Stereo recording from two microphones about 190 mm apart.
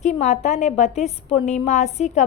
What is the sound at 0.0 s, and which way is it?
A woman's voice, 35° left (ahead or behind).